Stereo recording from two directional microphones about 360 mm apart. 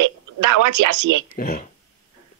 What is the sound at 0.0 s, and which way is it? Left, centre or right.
Speech, right.